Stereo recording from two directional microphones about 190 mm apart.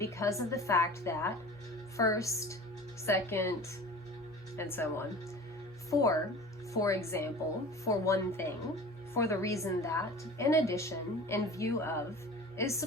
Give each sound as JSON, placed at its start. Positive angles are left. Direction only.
{"t": 0.0, "sound": "a woman's voice", "side_deg": 15}
{"t": 4.5, "sound": "a woman's voice", "side_deg": 10}